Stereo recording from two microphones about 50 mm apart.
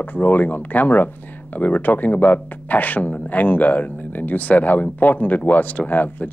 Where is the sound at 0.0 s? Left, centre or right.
Left.